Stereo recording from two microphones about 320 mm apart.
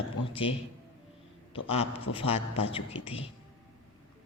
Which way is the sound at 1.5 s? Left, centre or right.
Centre.